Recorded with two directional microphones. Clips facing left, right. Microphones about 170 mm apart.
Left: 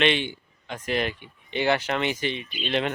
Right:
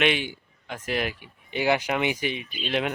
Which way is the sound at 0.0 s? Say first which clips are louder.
Left 1 dB; 5° right (ahead or behind).